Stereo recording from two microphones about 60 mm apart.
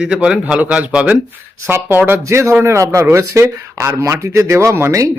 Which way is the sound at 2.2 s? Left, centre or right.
Right.